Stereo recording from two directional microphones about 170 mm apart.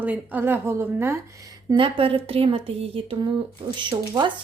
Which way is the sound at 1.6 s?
30° right (ahead or behind).